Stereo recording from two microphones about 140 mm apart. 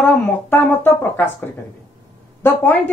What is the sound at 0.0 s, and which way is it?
Speech, 15° left (ahead or behind).